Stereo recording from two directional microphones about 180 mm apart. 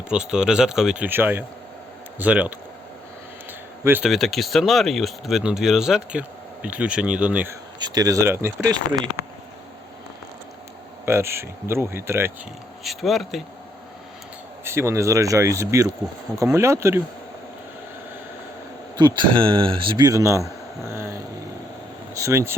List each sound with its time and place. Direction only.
0.1 s speech: 5° right (ahead or behind)
3.8 s speech: 5° right (ahead or behind)
7.8 s speech: 20° right (ahead or behind)
11.0 s speech: 15° right (ahead or behind)
12.8 s speech: centre (ahead or behind)
14.6 s speech: 15° right (ahead or behind)
18.9 s a man's voice: 25° right (ahead or behind)
22.2 s speech: 15° right (ahead or behind)